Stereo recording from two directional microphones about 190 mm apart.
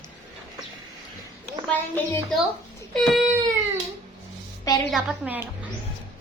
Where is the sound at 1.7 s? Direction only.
10° left (ahead or behind).